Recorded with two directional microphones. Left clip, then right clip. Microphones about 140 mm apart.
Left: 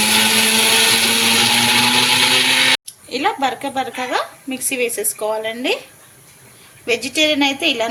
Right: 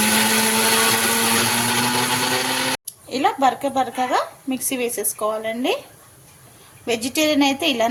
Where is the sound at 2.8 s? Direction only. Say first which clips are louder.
Left 1 dB; 50° right (ahead or behind).